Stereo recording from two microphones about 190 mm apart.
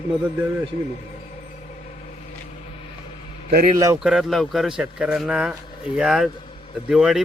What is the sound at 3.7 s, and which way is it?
Speech, 20° right (ahead or behind).